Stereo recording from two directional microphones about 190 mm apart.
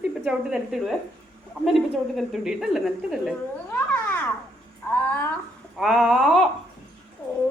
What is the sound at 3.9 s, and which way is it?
Babbling, 10° left (ahead or behind).